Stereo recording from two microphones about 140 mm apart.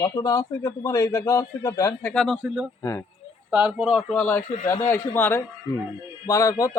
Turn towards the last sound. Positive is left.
turn(degrees=25)  # may be behind; listen again after turning